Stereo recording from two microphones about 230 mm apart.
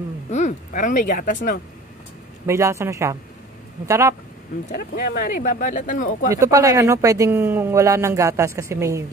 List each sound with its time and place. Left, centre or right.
0.3 s speech: left
2.4 s speech: centre
4.6 s speech: left
6.3 s speech: centre